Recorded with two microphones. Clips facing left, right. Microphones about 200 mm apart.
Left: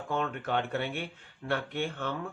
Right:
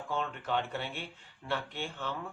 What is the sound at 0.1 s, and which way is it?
Speech, 55° left (ahead or behind).